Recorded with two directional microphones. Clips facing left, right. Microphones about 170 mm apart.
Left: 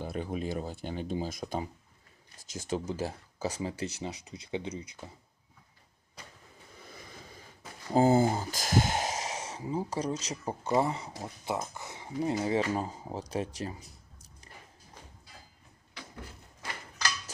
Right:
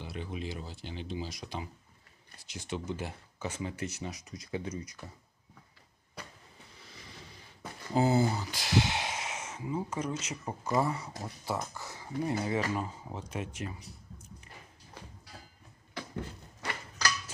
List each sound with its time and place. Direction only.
0.0 s speech: 45° left (ahead or behind); by 5.1 s 25° left (ahead or behind)
6.7 s a sound: 50° left (ahead or behind)
7.9 s speech: 45° left (ahead or behind); by 12.3 s 20° left (ahead or behind)
12.3 s speech: 30° left (ahead or behind)